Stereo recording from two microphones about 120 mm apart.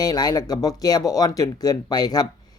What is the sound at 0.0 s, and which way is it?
Speech, 30° left (ahead or behind).